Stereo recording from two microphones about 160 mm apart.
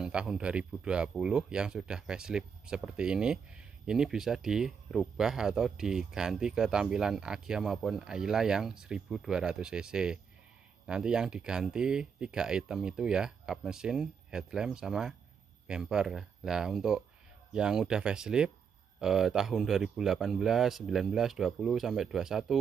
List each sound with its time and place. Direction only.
0.0 s speech: 5° right (ahead or behind)